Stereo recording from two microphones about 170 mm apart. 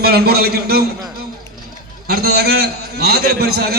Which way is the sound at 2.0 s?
65° right (ahead or behind).